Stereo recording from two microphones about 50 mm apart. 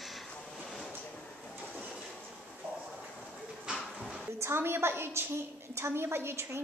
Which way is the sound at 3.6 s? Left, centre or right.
Centre.